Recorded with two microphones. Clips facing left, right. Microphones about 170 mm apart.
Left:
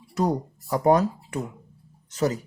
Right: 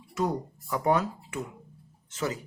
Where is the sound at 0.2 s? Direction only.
40° left (ahead or behind).